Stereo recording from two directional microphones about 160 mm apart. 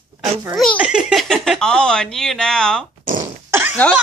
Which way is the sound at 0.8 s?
5° right (ahead or behind).